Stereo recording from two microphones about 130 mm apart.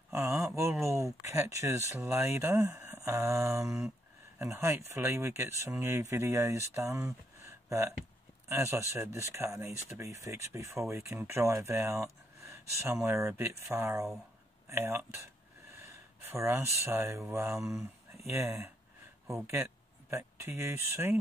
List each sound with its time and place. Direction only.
0.1 s speech: 20° right (ahead or behind)
7.4 s a sound: 20° right (ahead or behind)
8.5 s speech: 20° right (ahead or behind)